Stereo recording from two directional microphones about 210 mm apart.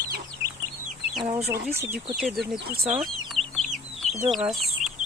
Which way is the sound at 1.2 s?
25° right (ahead or behind).